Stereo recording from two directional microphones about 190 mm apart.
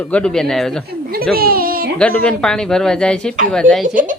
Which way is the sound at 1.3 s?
50° right (ahead or behind).